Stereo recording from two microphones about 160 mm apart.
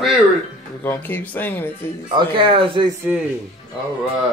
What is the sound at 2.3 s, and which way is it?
Speech, 35° right (ahead or behind).